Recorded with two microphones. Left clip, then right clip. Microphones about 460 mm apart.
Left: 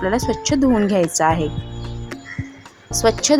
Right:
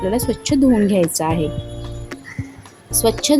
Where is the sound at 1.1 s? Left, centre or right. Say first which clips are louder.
Left 4 dB; right.